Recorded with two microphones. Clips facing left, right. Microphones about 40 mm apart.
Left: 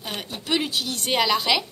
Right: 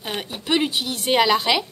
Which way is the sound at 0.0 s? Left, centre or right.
Centre.